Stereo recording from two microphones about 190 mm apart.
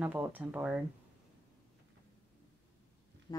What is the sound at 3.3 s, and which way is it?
Music, 20° left (ahead or behind).